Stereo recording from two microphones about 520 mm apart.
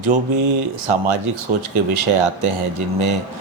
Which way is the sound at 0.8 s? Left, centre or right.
Right.